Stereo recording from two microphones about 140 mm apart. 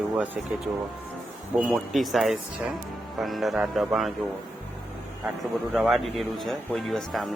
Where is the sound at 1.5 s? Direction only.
5° right (ahead or behind).